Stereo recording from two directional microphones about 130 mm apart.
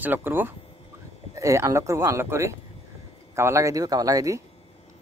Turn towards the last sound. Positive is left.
turn(degrees=-25)  # may be behind; listen again after turning